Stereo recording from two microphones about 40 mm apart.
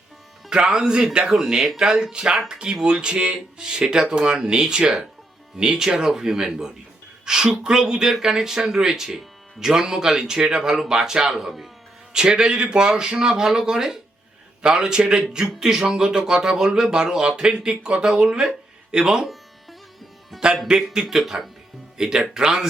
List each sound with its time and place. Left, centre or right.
0.5 s speech: centre
1.3 s speech: centre
12.1 s speech: centre
20.3 s speech: centre
20.7 s speech: centre